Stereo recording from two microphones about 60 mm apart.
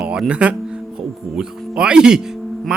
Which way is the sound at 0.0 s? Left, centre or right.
Centre.